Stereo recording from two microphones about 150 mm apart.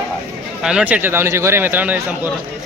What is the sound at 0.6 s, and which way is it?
A man's voice, 5° right (ahead or behind).